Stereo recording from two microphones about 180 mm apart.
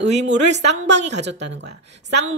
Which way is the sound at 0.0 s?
75° right (ahead or behind).